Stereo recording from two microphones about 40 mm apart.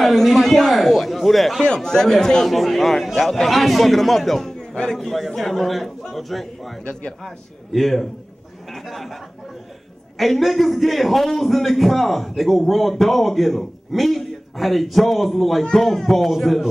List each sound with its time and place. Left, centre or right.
0.0 s a man's voice: centre
1.6 s speech: centre
2.5 s a man's voice: centre
7.7 s a man's voice: centre
10.1 s a man's voice: centre